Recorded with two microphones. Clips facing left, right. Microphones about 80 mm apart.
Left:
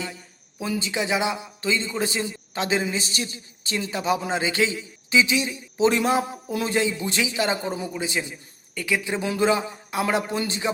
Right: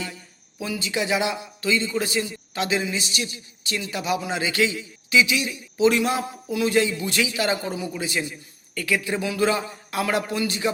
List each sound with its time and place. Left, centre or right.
0.8 s a man's voice: left